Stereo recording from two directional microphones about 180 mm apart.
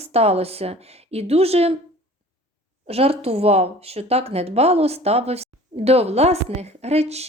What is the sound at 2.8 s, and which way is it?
A woman's voice, 35° right (ahead or behind).